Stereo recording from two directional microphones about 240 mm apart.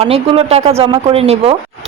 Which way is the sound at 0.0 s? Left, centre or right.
Right.